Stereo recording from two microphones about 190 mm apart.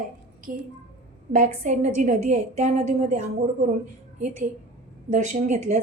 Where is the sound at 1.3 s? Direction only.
40° right (ahead or behind).